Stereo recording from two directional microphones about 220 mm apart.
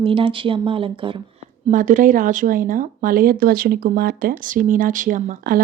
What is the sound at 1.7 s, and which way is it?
Speech, 35° right (ahead or behind).